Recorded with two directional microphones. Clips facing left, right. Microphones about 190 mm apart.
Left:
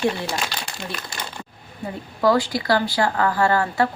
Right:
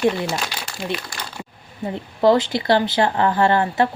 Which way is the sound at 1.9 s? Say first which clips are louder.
Right 3 dB; 25° right (ahead or behind).